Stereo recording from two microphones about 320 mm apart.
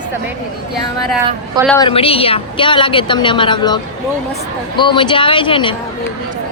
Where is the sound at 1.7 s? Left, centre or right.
Centre.